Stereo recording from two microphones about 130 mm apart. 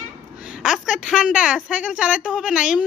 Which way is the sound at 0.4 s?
5° right (ahead or behind).